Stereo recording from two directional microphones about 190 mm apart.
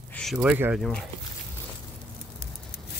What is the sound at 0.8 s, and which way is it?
Speech, 5° left (ahead or behind).